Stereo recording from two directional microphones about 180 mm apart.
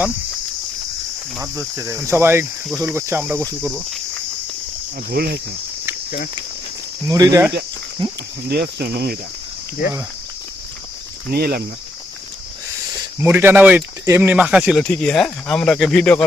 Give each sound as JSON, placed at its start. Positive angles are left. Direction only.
{"t": 1.4, "sound": "speech", "side_deg": -15}
{"t": 3.4, "sound": "speech", "side_deg": 5}
{"t": 5.1, "sound": "speech", "side_deg": -60}
{"t": 7.1, "sound": "cricket", "side_deg": -20}
{"t": 8.4, "sound": "speech", "side_deg": -60}
{"t": 11.3, "sound": "speech", "side_deg": -60}
{"t": 13.1, "sound": "speech", "side_deg": -10}